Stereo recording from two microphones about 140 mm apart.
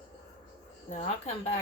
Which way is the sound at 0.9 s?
55° left (ahead or behind).